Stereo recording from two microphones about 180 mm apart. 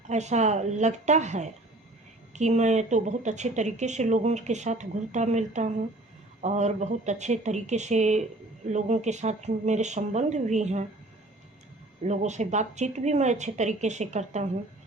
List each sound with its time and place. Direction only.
0.1 s speech: 40° right (ahead or behind)
12.0 s speech: 40° right (ahead or behind)